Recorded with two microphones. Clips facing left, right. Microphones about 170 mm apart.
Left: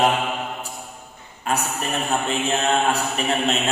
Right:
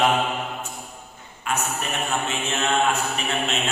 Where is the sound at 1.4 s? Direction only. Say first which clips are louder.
Left 2 dB; 35° left (ahead or behind).